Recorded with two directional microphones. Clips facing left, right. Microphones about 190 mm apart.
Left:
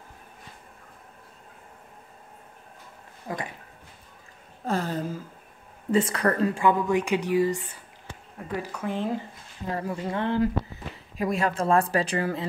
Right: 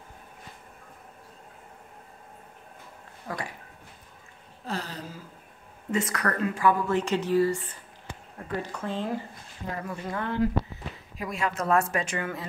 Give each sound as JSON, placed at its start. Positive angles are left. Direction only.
{"t": 3.3, "sound": "speech", "side_deg": 20}
{"t": 4.6, "sound": "a sound", "side_deg": 50}
{"t": 5.9, "sound": "speech", "side_deg": 30}
{"t": 8.7, "sound": "speech", "side_deg": 15}